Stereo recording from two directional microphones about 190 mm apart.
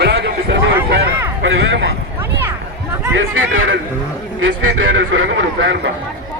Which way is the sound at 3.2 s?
75° right (ahead or behind).